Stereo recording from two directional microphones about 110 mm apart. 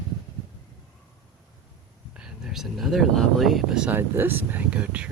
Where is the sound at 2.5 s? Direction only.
5° right (ahead or behind).